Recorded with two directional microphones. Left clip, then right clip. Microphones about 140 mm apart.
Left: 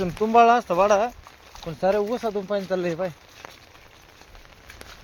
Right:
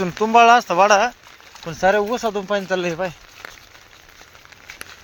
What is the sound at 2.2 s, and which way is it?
Speech, 40° right (ahead or behind).